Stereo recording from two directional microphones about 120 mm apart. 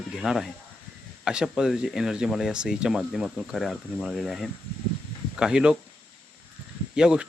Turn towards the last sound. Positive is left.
turn(degrees=-5)  # may be behind; listen again after turning